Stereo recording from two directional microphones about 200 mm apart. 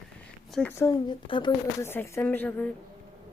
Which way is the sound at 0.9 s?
25° left (ahead or behind).